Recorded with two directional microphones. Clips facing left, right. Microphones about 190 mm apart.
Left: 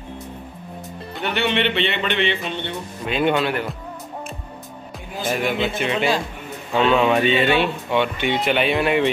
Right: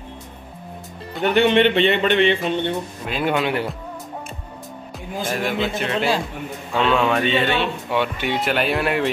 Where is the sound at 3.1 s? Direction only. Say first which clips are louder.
Left 3 dB; centre (ahead or behind).